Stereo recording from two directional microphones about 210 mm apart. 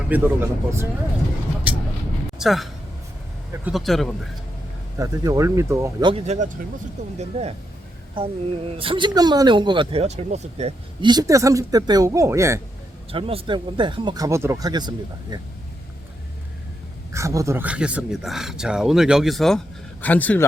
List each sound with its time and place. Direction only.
0.1 s speech: 10° right (ahead or behind)
2.4 s speech: centre (ahead or behind)
4.9 s speech: 20° right (ahead or behind)
8.7 s speech: 25° right (ahead or behind)
13.1 s speech: 25° right (ahead or behind)
17.1 s a man's voice: 15° right (ahead or behind); by 20.5 s 5° left (ahead or behind)